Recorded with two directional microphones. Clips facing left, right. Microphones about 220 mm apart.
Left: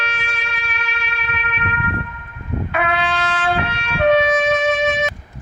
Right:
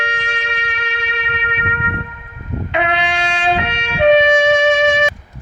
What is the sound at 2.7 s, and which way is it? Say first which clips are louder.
Trumpet: right 3 dB; 20° right (ahead or behind).